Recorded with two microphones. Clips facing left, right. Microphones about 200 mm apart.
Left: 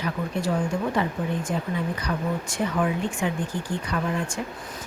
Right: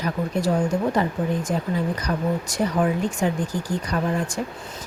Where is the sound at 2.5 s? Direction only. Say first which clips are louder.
Right 3 dB; 40° right (ahead or behind).